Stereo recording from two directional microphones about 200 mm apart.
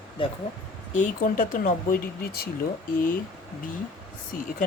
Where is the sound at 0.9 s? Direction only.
40° left (ahead or behind).